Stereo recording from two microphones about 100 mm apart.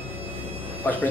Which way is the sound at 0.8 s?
15° left (ahead or behind).